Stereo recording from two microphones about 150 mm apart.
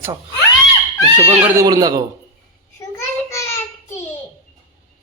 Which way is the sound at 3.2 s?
20° left (ahead or behind).